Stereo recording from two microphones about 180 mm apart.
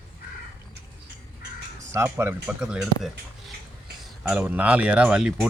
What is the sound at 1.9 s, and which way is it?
Speech, 15° right (ahead or behind).